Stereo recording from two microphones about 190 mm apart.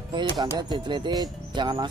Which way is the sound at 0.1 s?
25° right (ahead or behind).